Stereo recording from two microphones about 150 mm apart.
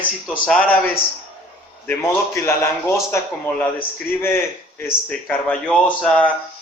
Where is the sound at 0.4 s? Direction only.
10° left (ahead or behind).